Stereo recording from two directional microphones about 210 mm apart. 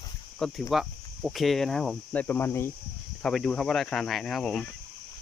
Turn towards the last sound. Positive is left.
turn(degrees=0)  # may be behind; listen again after turning